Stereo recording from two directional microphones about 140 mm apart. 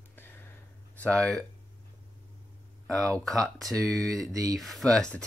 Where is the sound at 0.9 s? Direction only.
5° left (ahead or behind).